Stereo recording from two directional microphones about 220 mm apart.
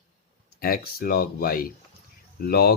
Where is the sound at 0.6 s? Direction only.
40° left (ahead or behind).